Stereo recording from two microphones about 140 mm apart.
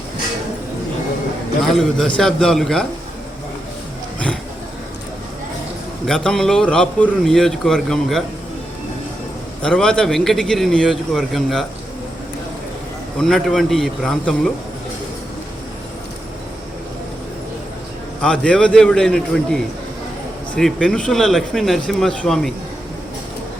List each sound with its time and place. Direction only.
1.6 s a man's voice: 5° left (ahead or behind)
6.1 s a man's voice: 5° left (ahead or behind)
9.6 s a man's voice: 5° left (ahead or behind)
13.1 s a man's voice: 5° left (ahead or behind)
18.2 s a man's voice: 5° left (ahead or behind)